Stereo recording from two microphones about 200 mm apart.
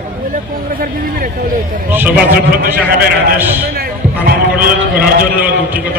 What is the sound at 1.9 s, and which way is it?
Speech, 10° right (ahead or behind).